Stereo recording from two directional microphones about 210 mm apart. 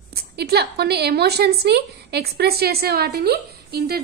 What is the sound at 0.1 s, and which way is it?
A woman's voice, 50° right (ahead or behind).